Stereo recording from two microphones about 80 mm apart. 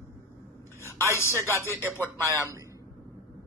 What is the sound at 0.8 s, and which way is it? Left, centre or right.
A man's voice, left.